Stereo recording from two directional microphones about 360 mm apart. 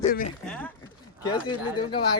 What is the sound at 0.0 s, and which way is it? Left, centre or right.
Speech, left.